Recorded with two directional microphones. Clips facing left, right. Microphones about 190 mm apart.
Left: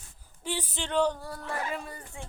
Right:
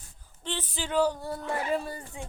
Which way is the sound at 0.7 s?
5° right (ahead or behind).